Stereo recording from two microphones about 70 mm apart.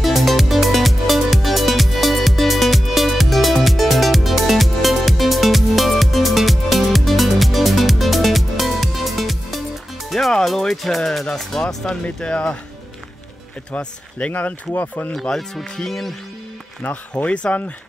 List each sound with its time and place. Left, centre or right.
0.0 s music: centre
11.0 s speech: centre
13.7 s speech: centre
15.1 s speech: centre
16.8 s speech: left